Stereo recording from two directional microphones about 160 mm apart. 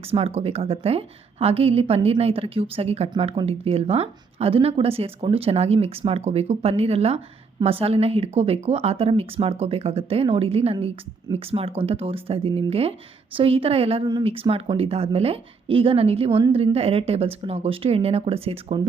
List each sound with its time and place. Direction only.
0.0 s a woman's voice: 40° right (ahead or behind)